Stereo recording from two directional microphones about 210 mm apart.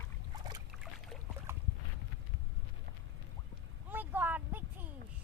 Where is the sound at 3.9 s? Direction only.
10° right (ahead or behind).